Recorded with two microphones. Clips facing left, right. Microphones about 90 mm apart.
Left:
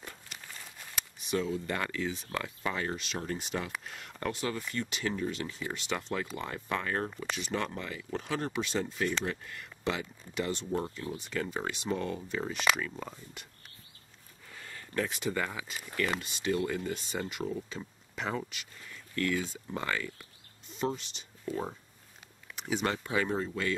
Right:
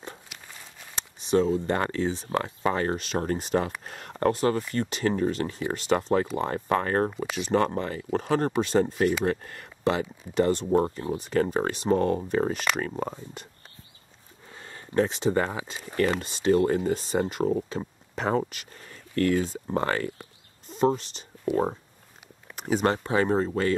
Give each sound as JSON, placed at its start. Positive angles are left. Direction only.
{"t": 0.3, "sound": "walk", "side_deg": -15}
{"t": 0.9, "sound": "speech", "side_deg": -30}
{"t": 14.5, "sound": "speech", "side_deg": -30}
{"t": 16.2, "sound": "speech", "side_deg": -35}
{"t": 22.5, "sound": "a sound", "side_deg": -40}
{"t": 23.0, "sound": "speech", "side_deg": -40}